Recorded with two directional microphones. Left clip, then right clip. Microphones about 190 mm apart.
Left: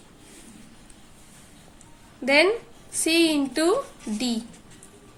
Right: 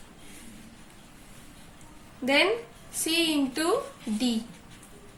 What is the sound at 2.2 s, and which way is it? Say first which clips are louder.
A woman's voice: left 4 dB; 45° left (ahead or behind).